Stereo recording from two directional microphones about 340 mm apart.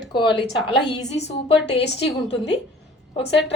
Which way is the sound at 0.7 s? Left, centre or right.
Left.